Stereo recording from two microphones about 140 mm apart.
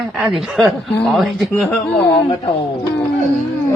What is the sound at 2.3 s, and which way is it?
Speech, 30° left (ahead or behind).